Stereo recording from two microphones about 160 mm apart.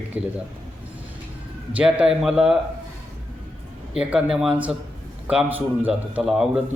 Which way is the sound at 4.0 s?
5° right (ahead or behind).